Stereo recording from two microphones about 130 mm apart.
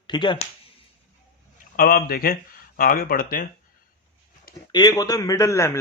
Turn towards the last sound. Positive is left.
turn(degrees=20)  # may be behind; listen again after turning